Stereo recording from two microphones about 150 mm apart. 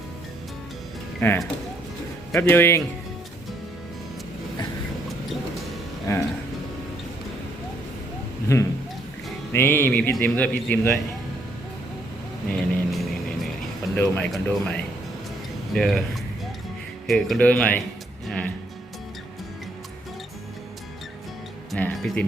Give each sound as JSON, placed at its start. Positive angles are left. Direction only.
{"t": 1.2, "sound": "speech", "side_deg": 15}
{"t": 2.4, "sound": "speech", "side_deg": 15}
{"t": 8.5, "sound": "speech", "side_deg": 20}
{"t": 12.5, "sound": "vehicle", "side_deg": 5}
{"t": 13.9, "sound": "speech", "side_deg": 10}
{"t": 15.7, "sound": "speech", "side_deg": 0}
{"t": 17.1, "sound": "speech", "side_deg": 0}
{"t": 18.3, "sound": "music", "side_deg": 10}
{"t": 21.8, "sound": "music", "side_deg": 10}